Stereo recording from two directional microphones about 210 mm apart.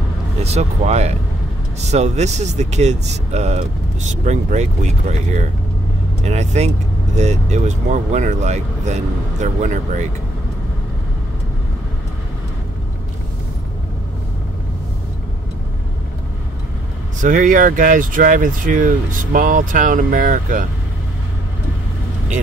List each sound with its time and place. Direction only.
0.4 s speech: 30° right (ahead or behind)
6.2 s speech: 30° right (ahead or behind)
17.2 s speech: 40° right (ahead or behind)